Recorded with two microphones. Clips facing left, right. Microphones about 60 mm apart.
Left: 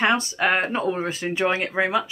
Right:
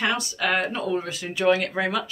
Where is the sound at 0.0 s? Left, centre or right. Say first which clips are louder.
Left 4 dB; left.